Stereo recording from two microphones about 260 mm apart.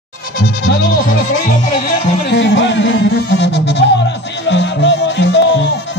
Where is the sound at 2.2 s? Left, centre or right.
Left.